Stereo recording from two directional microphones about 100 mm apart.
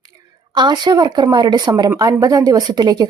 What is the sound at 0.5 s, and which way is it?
Speech, 45° right (ahead or behind).